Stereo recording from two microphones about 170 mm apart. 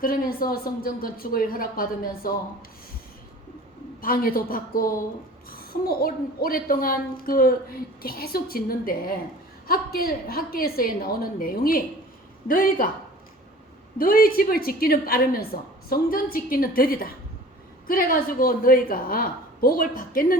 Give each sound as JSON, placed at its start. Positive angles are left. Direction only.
{"t": 0.0, "sound": "a woman's voice", "side_deg": 60}
{"t": 4.0, "sound": "a woman's voice", "side_deg": 55}
{"t": 14.0, "sound": "a woman's voice", "side_deg": 55}